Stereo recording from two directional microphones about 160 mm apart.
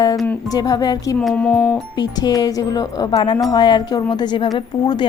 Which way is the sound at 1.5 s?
20° left (ahead or behind).